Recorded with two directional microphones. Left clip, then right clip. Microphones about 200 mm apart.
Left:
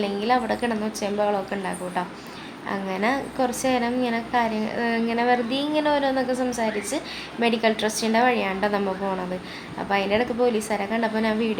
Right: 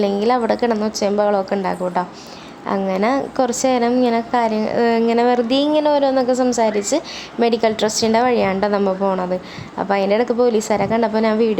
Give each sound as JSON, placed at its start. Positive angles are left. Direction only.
{"t": 0.0, "sound": "a woman's voice", "side_deg": -35}